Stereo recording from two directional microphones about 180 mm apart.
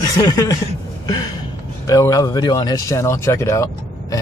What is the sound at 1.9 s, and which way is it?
Speech, 20° left (ahead or behind).